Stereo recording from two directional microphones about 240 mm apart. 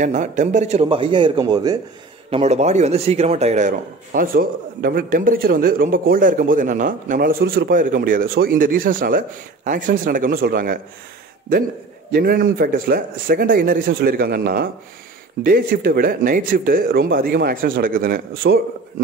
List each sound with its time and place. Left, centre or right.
0.0 s speech: right
2.3 s a man's voice: right
12.1 s a man's voice: right